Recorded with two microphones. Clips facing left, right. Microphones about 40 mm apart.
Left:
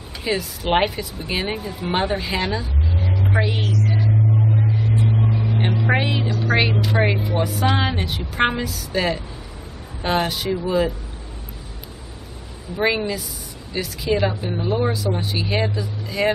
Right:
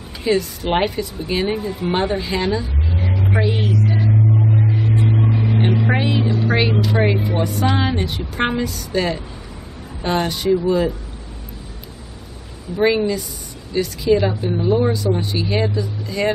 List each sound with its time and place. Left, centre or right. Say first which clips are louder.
0.2 s a woman's voice: right 5 dB; centre
3.0 s vehicle: right 2 dB; centre
3.3 s a woman's voice: right 3 dB; centre
3.7 s music: right 3 dB; centre
5.0 s vehicle: right 3 dB; centre
5.9 s a woman's voice: right 2 dB; centre
12.7 s a woman's voice: right 4 dB; centre